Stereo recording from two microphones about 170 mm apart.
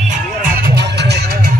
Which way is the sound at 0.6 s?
80° right.